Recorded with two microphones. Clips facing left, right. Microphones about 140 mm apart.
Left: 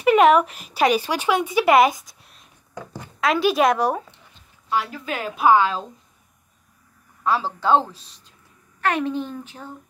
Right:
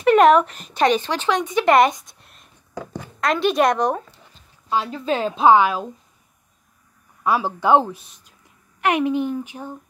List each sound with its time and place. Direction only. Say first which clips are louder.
0.0 s speech: right 1 dB; 5° left (ahead or behind)
4.6 s a woman's voice: right 3 dB; 25° right (ahead or behind)
7.2 s speech: right 2 dB; 15° right (ahead or behind)